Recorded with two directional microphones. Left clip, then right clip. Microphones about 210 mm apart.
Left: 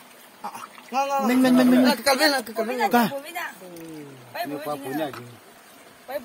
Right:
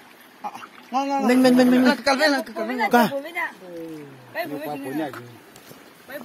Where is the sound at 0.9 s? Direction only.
55° left (ahead or behind).